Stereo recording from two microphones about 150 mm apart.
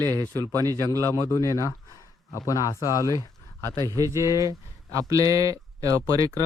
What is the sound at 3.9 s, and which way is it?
A man's voice, 20° right (ahead or behind).